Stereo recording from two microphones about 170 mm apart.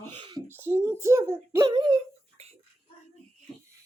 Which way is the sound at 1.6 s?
25° right (ahead or behind).